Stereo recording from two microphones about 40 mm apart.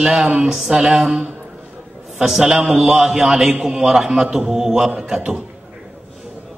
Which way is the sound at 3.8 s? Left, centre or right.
Centre.